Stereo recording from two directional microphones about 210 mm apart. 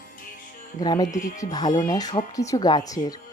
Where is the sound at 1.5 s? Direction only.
20° left (ahead or behind).